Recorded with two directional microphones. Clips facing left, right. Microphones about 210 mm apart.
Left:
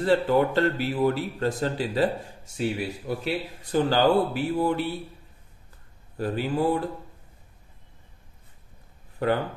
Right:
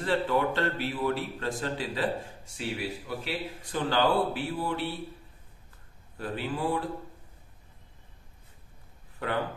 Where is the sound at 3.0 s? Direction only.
40° left (ahead or behind).